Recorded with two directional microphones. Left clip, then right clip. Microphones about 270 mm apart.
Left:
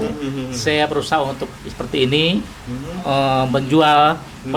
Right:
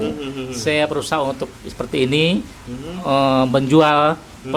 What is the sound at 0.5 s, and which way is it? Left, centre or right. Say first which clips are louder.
Speech: left 1 dB; right.